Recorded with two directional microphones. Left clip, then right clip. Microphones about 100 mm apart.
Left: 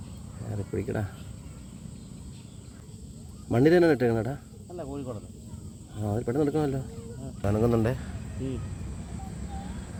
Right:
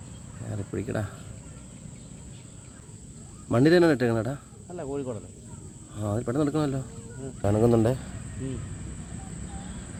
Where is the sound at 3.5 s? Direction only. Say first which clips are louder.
Right 1 dB; 20° right (ahead or behind).